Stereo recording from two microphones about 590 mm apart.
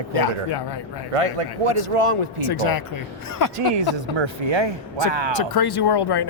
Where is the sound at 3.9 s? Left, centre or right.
Right.